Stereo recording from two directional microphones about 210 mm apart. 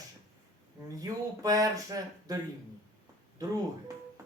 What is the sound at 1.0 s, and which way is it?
Speech, 15° right (ahead or behind).